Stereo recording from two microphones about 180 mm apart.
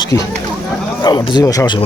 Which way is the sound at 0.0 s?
20° left (ahead or behind).